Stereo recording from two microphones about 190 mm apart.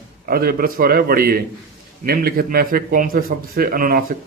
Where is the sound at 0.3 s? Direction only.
50° right (ahead or behind).